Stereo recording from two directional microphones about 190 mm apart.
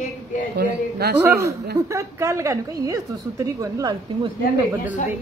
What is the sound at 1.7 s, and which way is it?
A woman's voice, 15° right (ahead or behind).